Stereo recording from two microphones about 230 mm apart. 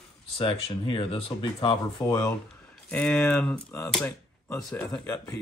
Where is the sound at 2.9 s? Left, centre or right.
Centre.